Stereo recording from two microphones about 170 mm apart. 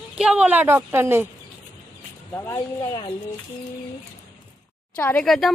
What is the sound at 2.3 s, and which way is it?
Speech, 15° left (ahead or behind).